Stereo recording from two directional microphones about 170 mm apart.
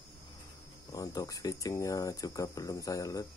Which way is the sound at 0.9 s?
20° left (ahead or behind).